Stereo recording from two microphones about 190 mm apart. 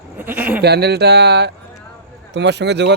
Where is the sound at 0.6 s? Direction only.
60° right (ahead or behind).